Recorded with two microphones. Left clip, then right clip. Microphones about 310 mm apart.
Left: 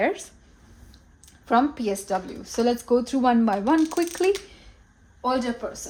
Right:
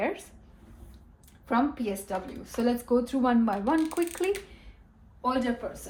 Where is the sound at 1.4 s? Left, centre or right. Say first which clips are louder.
Left 6 dB; left.